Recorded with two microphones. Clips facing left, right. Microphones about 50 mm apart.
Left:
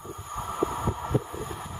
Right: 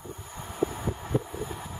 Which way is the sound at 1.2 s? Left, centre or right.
Centre.